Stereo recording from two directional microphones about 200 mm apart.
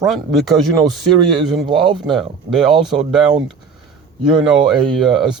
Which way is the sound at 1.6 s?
25° right (ahead or behind).